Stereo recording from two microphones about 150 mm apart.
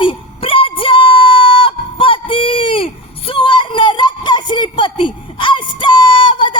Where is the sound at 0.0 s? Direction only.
35° left (ahead or behind).